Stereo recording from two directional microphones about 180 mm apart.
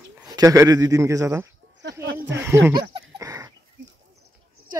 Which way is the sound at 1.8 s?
70° right (ahead or behind).